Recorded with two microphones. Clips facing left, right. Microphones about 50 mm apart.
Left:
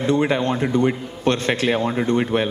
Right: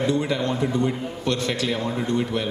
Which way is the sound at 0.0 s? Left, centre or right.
Left.